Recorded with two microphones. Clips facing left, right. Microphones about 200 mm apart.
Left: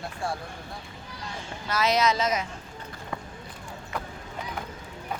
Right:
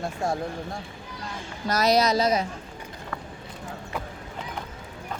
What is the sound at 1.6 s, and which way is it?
Speech, 40° right (ahead or behind).